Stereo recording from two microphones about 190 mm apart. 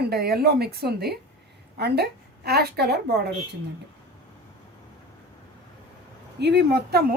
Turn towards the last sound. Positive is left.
turn(degrees=-55)  # may be behind; listen again after turning